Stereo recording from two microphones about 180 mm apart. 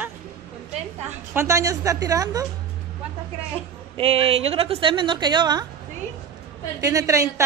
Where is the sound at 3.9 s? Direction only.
30° right (ahead or behind).